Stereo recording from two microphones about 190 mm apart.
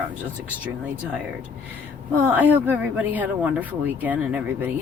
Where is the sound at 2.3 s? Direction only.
10° right (ahead or behind).